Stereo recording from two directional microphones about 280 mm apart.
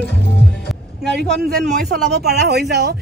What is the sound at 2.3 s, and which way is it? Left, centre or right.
Speech, right.